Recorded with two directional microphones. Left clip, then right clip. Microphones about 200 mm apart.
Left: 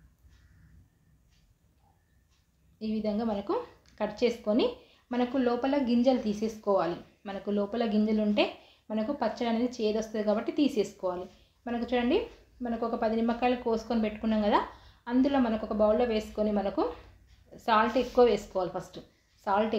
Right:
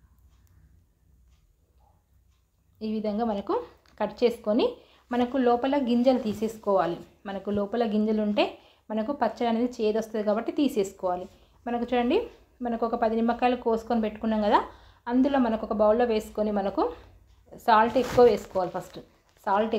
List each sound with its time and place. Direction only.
2.8 s a woman's voice: 20° right (ahead or behind)